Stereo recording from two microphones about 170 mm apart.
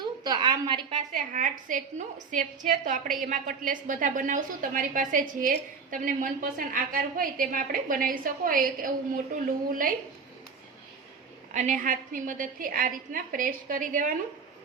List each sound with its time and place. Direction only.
0.0 s a sound: 25° right (ahead or behind)
0.9 s a woman's voice: 50° right (ahead or behind)
11.5 s a woman's voice: 45° right (ahead or behind)